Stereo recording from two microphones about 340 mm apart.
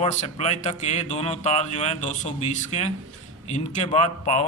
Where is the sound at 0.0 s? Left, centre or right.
Centre.